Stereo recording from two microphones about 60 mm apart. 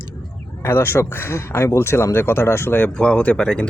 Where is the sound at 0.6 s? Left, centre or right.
Left.